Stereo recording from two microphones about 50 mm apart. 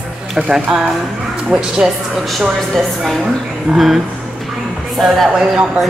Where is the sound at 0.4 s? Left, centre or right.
Centre.